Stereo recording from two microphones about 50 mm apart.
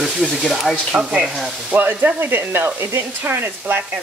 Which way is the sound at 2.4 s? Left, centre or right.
Right.